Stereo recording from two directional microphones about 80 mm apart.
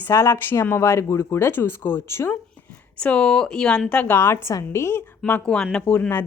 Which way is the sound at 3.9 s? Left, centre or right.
Centre.